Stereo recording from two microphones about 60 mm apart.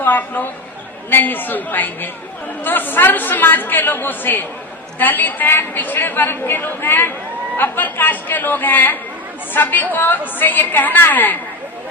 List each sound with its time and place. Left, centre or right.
0.0 s a man's voice: left